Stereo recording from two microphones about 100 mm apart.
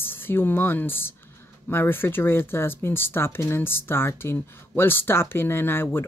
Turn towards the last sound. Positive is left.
turn(degrees=20)  # may be behind; listen again after turning